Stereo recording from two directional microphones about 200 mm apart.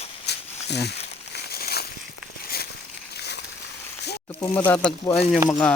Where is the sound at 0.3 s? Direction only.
55° left (ahead or behind).